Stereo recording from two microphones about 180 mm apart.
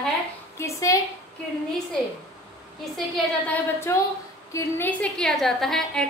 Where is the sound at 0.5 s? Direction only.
15° left (ahead or behind).